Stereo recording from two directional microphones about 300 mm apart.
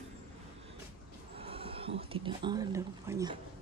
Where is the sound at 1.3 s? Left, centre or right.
Centre.